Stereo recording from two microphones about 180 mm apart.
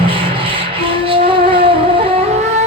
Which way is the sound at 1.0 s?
30° right (ahead or behind).